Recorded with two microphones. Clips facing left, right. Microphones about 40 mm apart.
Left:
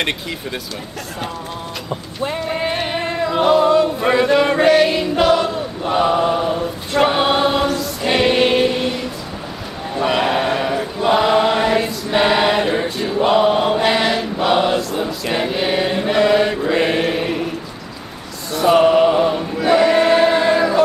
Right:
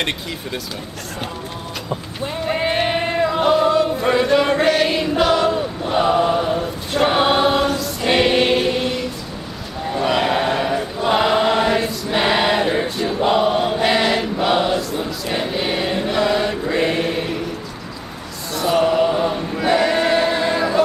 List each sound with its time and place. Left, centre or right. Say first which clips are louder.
2.4 s a sound: right 5 dB; centre
3.3 s choir: left 4 dB; centre
4.0 s chant: left 2 dB; centre
5.1 s choir: left 1 dB; centre
9.9 s chant: left 1 dB; centre
11.1 s choir: left 1 dB; centre
13.8 s chant: even; centre
16.7 s mantra: left 1 dB; centre
18.7 s a sound: left 4 dB; left
19.6 s choir: left 4 dB; centre